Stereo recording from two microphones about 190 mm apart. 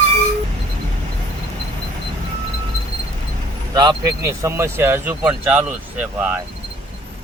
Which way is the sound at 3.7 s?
20° right (ahead or behind).